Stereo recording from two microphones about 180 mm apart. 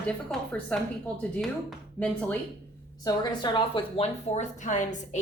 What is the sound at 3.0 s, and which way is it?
A woman's voice, 20° left (ahead or behind).